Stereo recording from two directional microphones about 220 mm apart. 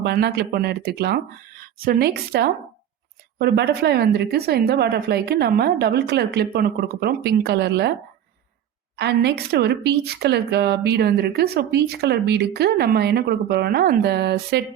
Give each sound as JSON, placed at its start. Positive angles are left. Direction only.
{"t": 0.0, "sound": "a woman's voice", "side_deg": -45}
{"t": 9.0, "sound": "a woman's voice", "side_deg": -50}